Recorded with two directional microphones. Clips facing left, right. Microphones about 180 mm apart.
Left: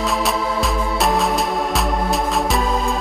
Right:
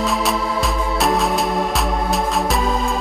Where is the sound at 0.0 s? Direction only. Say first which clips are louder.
Even; centre (ahead or behind).